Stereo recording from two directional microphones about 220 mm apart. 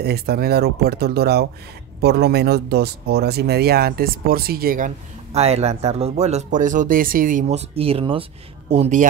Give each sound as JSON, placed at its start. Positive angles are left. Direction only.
{"t": 0.0, "sound": "speech", "side_deg": -45}